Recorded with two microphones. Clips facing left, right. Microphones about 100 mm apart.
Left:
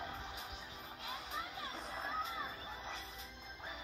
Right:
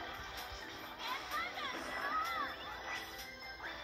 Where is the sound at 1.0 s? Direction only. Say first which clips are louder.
Right 3 dB; 90° right.